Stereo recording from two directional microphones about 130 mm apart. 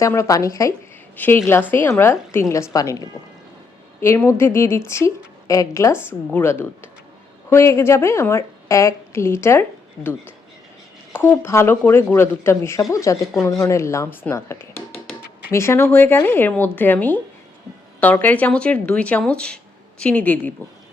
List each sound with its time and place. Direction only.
0.0 s speech: 25° left (ahead or behind)
4.0 s a woman's voice: 20° left (ahead or behind)